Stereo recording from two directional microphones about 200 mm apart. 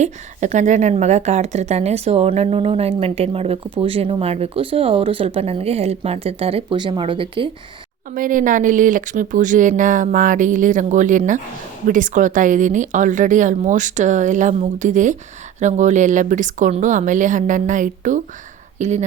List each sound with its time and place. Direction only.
0.0 s a woman's voice: 35° right (ahead or behind)
8.1 s speech: 45° right (ahead or behind)